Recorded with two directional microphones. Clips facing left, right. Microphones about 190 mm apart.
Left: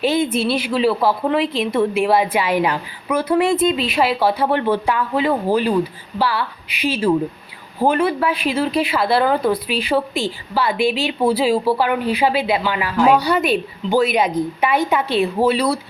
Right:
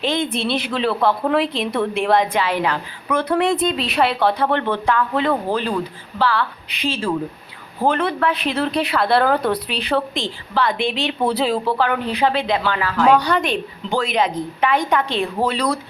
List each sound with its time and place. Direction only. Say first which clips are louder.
0.0 s a woman's voice: left 4 dB; 5° left (ahead or behind)